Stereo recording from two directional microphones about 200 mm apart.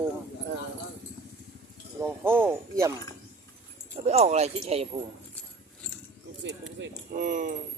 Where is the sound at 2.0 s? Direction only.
10° right (ahead or behind).